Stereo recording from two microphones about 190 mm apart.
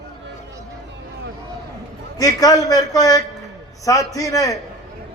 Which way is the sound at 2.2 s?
20° left (ahead or behind).